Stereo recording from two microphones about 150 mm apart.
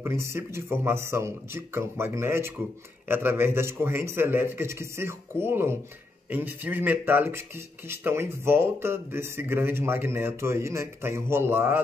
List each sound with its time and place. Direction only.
0.0 s speech: 20° right (ahead or behind)